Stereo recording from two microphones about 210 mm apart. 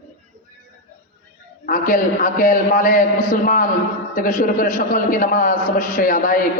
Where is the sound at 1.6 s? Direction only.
40° left (ahead or behind).